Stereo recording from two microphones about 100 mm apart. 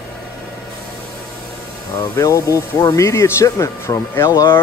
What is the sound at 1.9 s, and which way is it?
Speech, 30° left (ahead or behind).